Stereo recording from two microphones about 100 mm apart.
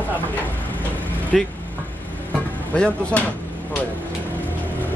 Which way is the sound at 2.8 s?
10° left (ahead or behind).